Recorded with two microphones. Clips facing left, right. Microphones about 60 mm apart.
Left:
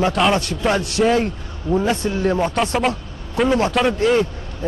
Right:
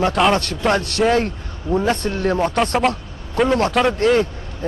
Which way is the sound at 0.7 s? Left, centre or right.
Right.